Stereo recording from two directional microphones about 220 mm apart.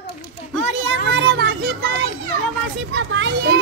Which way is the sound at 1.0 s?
55° right (ahead or behind).